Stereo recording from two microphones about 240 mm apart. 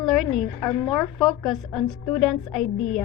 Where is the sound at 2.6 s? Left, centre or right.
Left.